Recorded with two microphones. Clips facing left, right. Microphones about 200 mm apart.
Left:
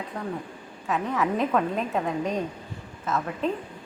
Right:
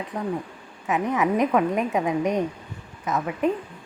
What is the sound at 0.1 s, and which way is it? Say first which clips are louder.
A woman's voice: right 6 dB; 15° right (ahead or behind).